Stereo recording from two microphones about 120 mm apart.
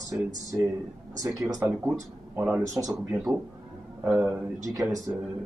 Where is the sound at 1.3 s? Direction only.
30° right (ahead or behind).